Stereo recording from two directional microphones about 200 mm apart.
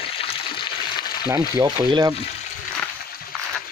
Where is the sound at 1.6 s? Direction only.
20° right (ahead or behind).